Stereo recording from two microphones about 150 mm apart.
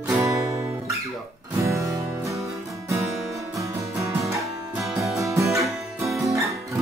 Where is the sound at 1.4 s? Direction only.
20° right (ahead or behind).